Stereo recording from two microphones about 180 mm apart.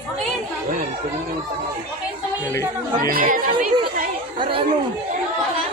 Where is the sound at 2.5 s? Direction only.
15° left (ahead or behind).